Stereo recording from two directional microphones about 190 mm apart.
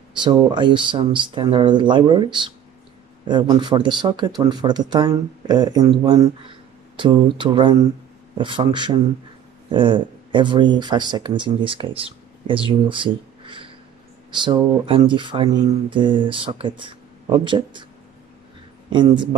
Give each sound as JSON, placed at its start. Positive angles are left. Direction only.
{"t": 0.2, "sound": "speech", "side_deg": -25}
{"t": 18.9, "sound": "speech", "side_deg": -25}